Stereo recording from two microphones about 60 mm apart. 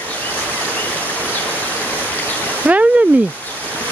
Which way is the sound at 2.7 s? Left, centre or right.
Right.